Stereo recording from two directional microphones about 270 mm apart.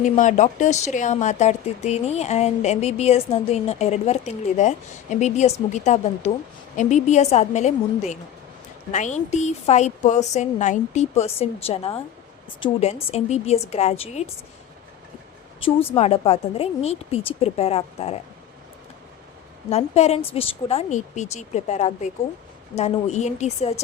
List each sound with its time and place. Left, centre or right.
0.0 s speech: left
15.6 s speech: centre
19.7 s speech: left